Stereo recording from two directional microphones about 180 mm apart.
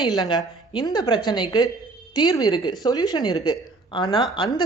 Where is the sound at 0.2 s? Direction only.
25° left (ahead or behind).